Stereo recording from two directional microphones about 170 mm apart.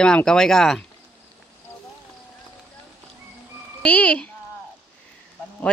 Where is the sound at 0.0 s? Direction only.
5° left (ahead or behind).